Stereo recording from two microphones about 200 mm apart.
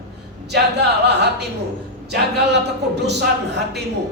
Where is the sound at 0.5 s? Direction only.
55° right (ahead or behind).